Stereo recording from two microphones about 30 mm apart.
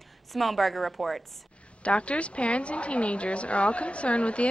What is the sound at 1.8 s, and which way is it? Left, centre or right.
A woman's voice, left.